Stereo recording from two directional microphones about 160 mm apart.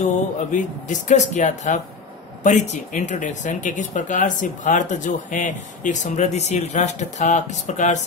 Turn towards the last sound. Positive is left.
turn(degrees=50)  # may be behind; listen again after turning